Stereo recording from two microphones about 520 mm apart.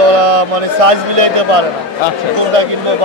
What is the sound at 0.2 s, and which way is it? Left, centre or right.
A man's voice, right.